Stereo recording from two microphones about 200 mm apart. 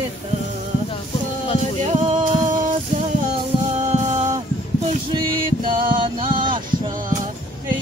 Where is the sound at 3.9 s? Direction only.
35° right (ahead or behind).